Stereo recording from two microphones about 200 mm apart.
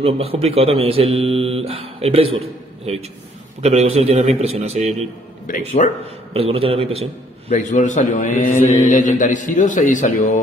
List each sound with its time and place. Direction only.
0.0 s a man's voice: 30° right (ahead or behind)
5.5 s speech: 40° left (ahead or behind)
6.3 s speech: 30° right (ahead or behind)
7.4 s speech: 35° left (ahead or behind)